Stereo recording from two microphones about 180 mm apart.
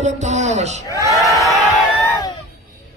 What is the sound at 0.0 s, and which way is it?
Speech, 40° right (ahead or behind).